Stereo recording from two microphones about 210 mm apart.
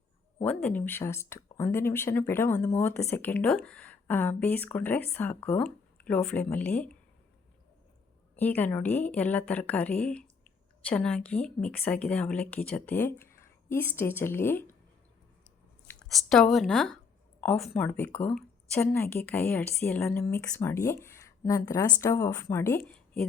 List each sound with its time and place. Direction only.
0.4 s a woman's voice: 10° left (ahead or behind)
8.4 s a woman's voice: 10° left (ahead or behind)
15.9 s a woman's voice: 5° left (ahead or behind)